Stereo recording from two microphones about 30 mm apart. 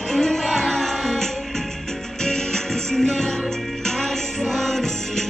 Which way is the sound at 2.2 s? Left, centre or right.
Centre.